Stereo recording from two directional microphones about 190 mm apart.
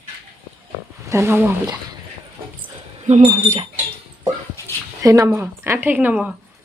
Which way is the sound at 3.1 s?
35° right (ahead or behind).